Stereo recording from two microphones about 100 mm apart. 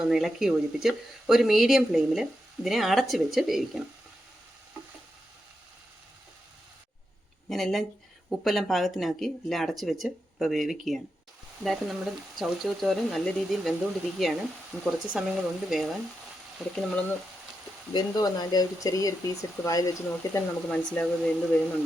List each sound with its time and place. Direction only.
0.1 s speech: 5° right (ahead or behind)
7.5 s speech: centre (ahead or behind)
17.9 s speech: 40° left (ahead or behind)
20.7 s speech: 10° left (ahead or behind)